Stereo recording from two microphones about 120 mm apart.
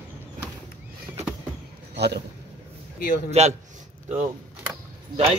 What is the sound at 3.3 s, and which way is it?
Speech, 65° right (ahead or behind).